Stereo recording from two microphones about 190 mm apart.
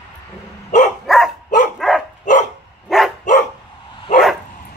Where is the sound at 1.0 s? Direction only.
Centre (ahead or behind).